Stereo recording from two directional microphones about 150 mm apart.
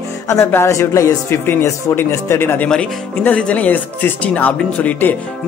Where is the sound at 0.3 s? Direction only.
20° left (ahead or behind).